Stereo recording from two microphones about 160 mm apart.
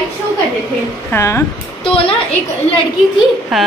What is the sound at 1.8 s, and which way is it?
Speech, 35° left (ahead or behind).